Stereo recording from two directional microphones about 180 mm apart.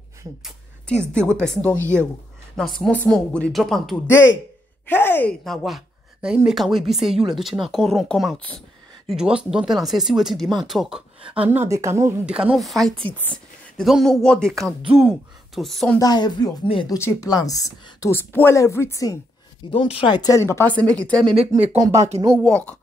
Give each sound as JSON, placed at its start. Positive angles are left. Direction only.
{"t": 0.4, "sound": "speech", "side_deg": 5}
{"t": 16.0, "sound": "speech", "side_deg": 20}
{"t": 19.7, "sound": "speech", "side_deg": 30}
{"t": 21.9, "sound": "speech", "side_deg": -40}
{"t": 22.4, "sound": "speech", "side_deg": 5}